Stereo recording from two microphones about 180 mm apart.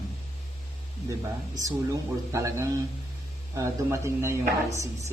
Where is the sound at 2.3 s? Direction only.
15° right (ahead or behind).